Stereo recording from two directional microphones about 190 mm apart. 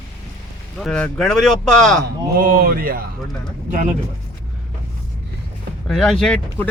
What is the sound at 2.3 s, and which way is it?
Speech, 50° right (ahead or behind).